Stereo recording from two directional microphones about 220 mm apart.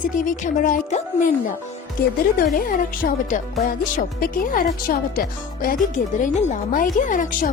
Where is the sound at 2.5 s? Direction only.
40° left (ahead or behind).